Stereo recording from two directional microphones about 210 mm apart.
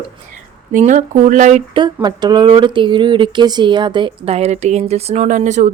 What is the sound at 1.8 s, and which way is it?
Speech, 20° right (ahead or behind).